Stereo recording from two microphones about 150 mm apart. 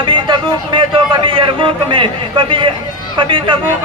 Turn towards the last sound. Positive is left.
turn(degrees=-35)  # may be behind; listen again after turning